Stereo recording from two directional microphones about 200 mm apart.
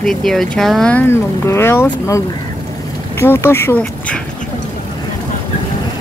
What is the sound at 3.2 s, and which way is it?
Speech, 10° left (ahead or behind).